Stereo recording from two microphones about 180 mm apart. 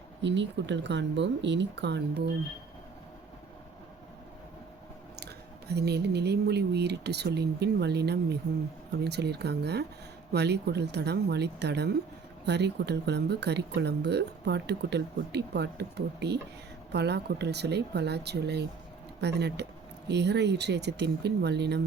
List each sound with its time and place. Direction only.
0.2 s speech: 80° right
5.2 s speech: 65° right (ahead or behind)